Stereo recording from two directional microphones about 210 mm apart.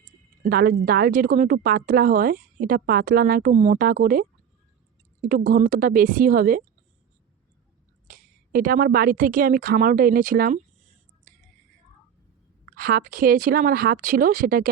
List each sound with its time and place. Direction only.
0.4 s a woman's voice: 45° right (ahead or behind)
5.5 s speech: 40° right (ahead or behind)
8.0 s speech: 40° right (ahead or behind)
12.6 s a woman's voice: 45° right (ahead or behind)